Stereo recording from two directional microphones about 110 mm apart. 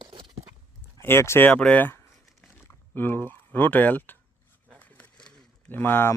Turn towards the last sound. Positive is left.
turn(degrees=20)  # may be behind; listen again after turning